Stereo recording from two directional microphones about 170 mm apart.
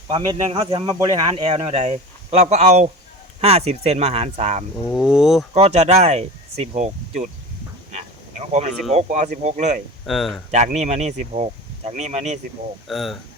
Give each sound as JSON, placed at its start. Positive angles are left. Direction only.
{"t": 0.1, "sound": "speech", "side_deg": -25}
{"t": 1.9, "sound": "speech", "side_deg": -40}
{"t": 4.9, "sound": "speech", "side_deg": -5}
{"t": 5.5, "sound": "speech", "side_deg": -40}
{"t": 8.9, "sound": "speech", "side_deg": -40}
{"t": 10.1, "sound": "speech", "side_deg": 0}
{"t": 10.5, "sound": "speech", "side_deg": -45}
{"t": 12.9, "sound": "speech", "side_deg": 0}